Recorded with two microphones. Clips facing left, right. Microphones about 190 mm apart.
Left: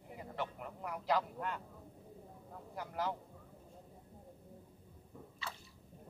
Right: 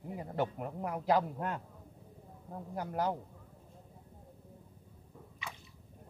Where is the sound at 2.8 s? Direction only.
45° right (ahead or behind).